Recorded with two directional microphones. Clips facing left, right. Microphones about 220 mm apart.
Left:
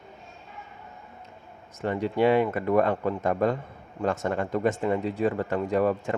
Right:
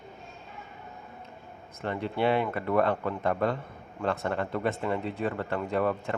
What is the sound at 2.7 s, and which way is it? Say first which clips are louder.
Speech: left 1 dB; 40° left (ahead or behind).